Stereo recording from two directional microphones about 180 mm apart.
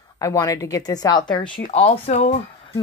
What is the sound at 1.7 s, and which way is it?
Speech, 40° left (ahead or behind).